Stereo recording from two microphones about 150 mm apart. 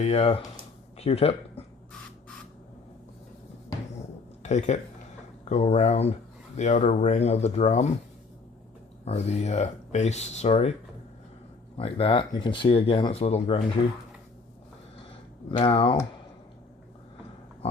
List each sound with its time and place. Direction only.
0.0 s speech: 40° left (ahead or behind)
4.4 s speech: 50° left (ahead or behind)
9.0 s speech: 45° left (ahead or behind)
11.8 s speech: 40° left (ahead or behind)
15.4 s speech: 35° left (ahead or behind)